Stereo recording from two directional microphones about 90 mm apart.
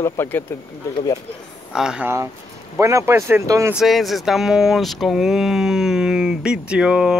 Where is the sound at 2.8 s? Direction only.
35° right (ahead or behind).